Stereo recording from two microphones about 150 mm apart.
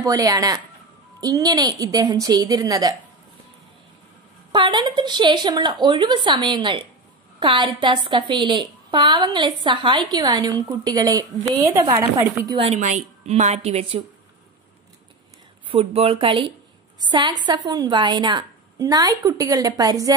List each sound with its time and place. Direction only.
0.0 s a woman's voice: 25° right (ahead or behind)
4.5 s a woman's voice: 30° right (ahead or behind); by 12.4 s 15° right (ahead or behind)
12.6 s a woman's voice: 55° right (ahead or behind)
15.7 s a woman's voice: 40° right (ahead or behind); by 20.1 s 25° right (ahead or behind)